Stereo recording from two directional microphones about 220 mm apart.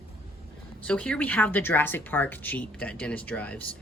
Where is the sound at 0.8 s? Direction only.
5° left (ahead or behind).